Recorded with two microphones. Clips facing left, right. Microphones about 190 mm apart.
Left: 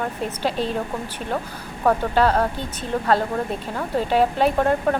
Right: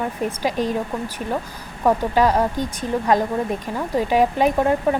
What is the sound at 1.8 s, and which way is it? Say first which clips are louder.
Speech: right 1 dB; 10° right (ahead or behind).